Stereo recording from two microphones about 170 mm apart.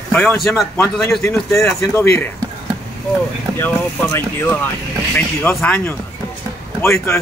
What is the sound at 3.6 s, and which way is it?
Speech, 15° left (ahead or behind).